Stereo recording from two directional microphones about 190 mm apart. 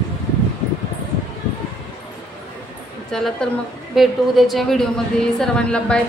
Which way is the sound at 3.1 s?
5° left (ahead or behind).